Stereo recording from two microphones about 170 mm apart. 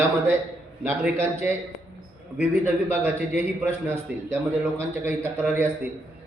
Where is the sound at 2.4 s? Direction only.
10° right (ahead or behind).